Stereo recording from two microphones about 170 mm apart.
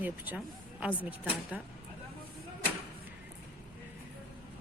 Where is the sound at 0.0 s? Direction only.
10° right (ahead or behind).